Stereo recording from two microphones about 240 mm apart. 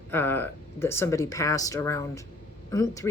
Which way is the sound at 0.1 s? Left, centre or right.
Centre.